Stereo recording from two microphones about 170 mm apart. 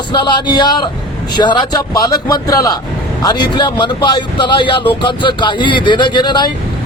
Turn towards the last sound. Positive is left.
turn(degrees=25)  # may be behind; listen again after turning